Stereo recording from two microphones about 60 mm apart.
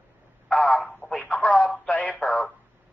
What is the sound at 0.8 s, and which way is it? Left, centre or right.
Radio, centre.